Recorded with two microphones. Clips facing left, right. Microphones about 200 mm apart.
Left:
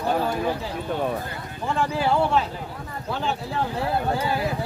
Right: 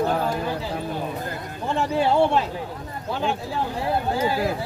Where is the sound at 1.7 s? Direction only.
25° right (ahead or behind).